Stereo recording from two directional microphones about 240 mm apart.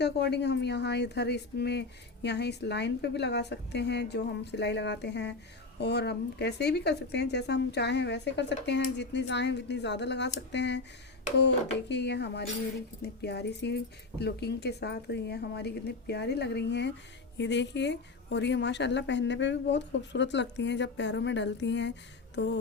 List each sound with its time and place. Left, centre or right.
0.0 s a woman's voice: left